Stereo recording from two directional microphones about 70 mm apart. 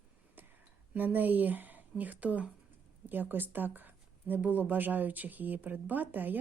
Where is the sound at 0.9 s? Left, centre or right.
Right.